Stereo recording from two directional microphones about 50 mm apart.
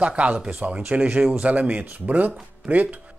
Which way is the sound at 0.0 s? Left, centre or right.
Right.